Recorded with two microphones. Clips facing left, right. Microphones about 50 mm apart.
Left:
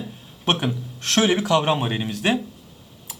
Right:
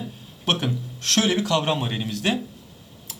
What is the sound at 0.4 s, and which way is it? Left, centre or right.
Speech, centre.